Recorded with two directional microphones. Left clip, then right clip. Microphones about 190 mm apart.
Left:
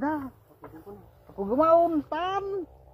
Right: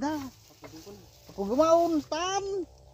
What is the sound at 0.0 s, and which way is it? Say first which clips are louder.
Chicken: left 3 dB; 35° right (ahead or behind).